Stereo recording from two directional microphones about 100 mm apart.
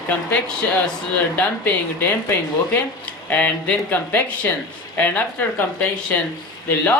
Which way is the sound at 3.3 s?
15° left (ahead or behind).